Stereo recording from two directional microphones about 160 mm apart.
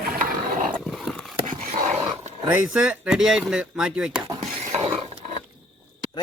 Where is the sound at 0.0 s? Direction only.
60° right (ahead or behind).